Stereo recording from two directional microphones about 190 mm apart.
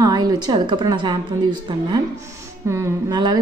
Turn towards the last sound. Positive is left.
turn(degrees=-20)  # may be behind; listen again after turning